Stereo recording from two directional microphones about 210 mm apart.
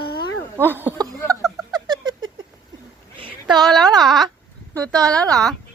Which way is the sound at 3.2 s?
20° right (ahead or behind).